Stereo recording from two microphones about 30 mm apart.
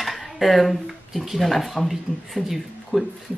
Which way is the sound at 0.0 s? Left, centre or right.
Centre.